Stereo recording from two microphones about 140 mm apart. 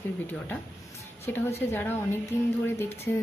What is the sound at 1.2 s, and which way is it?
Speech, 15° left (ahead or behind).